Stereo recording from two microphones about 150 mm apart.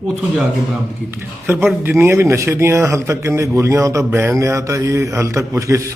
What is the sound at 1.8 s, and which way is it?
Speech, 15° right (ahead or behind).